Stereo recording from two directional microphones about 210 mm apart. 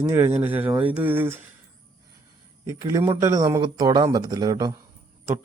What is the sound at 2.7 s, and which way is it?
Speech, 15° right (ahead or behind).